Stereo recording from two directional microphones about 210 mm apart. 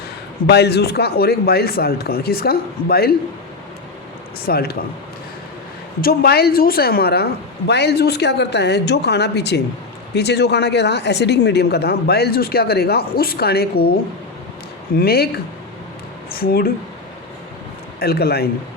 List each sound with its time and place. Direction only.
0.4 s speech: 50° left (ahead or behind)
4.4 s speech: 45° left (ahead or behind)
6.0 s speech: 45° left (ahead or behind)
14.9 s speech: 45° left (ahead or behind)
16.4 s speech: 45° left (ahead or behind)
18.0 s speech: 50° left (ahead or behind)